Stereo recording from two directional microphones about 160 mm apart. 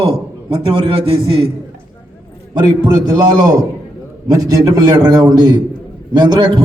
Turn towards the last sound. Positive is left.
turn(degrees=-30)  # may be behind; listen again after turning